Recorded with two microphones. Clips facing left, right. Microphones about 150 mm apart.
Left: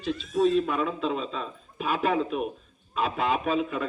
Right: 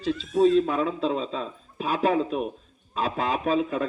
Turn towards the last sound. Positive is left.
turn(degrees=-35)  # may be behind; listen again after turning